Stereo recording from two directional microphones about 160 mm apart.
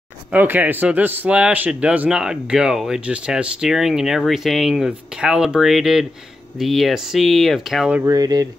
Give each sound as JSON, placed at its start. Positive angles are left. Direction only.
{"t": 0.3, "sound": "a man's voice", "side_deg": -10}
{"t": 8.0, "sound": "speech", "side_deg": -25}